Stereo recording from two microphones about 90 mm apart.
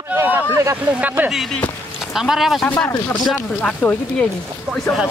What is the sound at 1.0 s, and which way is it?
Speech, 20° right (ahead or behind).